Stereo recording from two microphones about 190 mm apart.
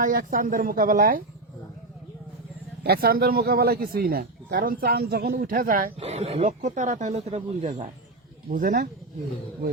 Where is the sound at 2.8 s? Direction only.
55° right (ahead or behind).